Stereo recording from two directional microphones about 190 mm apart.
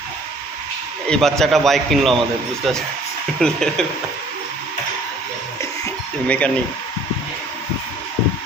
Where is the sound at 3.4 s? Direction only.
5° left (ahead or behind).